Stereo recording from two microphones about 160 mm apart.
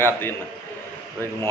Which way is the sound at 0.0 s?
15° left (ahead or behind).